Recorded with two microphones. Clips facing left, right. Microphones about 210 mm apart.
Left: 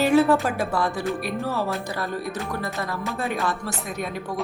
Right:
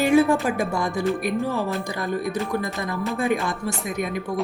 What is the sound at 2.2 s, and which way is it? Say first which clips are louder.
Speech: right 4 dB; centre (ahead or behind).